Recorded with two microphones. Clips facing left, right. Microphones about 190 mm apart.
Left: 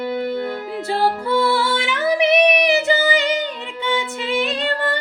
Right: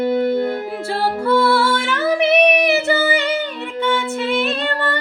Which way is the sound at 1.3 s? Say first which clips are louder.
Right 7 dB; 20° left (ahead or behind).